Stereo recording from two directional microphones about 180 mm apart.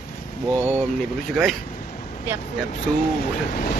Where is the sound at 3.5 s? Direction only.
50° left (ahead or behind).